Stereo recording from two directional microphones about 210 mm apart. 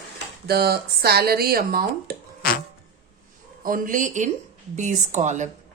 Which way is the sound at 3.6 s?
40° right (ahead or behind).